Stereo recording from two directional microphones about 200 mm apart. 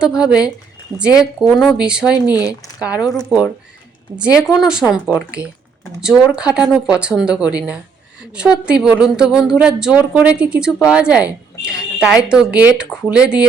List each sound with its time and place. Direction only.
0.0 s a woman's voice: 5° right (ahead or behind)
2.3 s speech: 20° left (ahead or behind)
3.2 s a woman's voice: 5° right (ahead or behind)
12.9 s speech: 15° left (ahead or behind)
13.1 s a woman's voice: 5° right (ahead or behind)